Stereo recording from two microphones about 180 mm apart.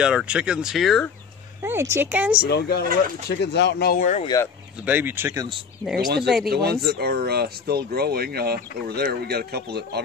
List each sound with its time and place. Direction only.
0.0 s speech: 5° right (ahead or behind)
1.6 s speech: 15° right (ahead or behind)
2.4 s speech: 60° left (ahead or behind)
4.8 s speech: 10° right (ahead or behind)
6.2 s speech: centre (ahead or behind)
6.5 s speech: 60° right (ahead or behind)